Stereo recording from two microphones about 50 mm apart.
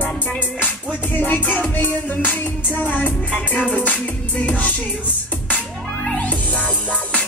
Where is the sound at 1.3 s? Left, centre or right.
Left.